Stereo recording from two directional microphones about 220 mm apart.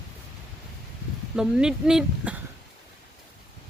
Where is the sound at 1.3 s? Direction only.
5° right (ahead or behind).